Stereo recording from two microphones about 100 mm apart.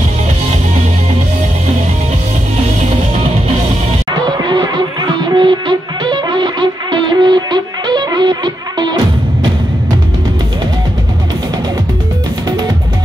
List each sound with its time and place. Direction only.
4.1 s music: 45° right (ahead or behind)
12.4 s music: 40° right (ahead or behind)